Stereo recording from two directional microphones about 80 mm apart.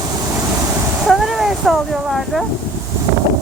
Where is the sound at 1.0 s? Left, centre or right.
Centre.